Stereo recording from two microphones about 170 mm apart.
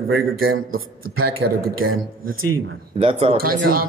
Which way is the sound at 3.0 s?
35° right (ahead or behind).